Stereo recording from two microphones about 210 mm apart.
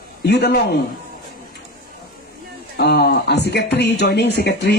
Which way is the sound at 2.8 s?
50° left (ahead or behind).